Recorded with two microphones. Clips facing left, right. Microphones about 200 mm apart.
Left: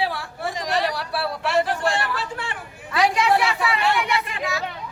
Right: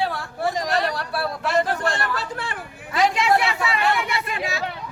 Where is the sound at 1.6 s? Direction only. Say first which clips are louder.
Left 1 dB; 40° right (ahead or behind).